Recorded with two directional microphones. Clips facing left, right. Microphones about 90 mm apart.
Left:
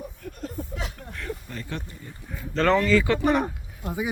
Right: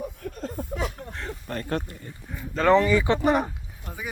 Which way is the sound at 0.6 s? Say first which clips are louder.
Even; 50° right (ahead or behind).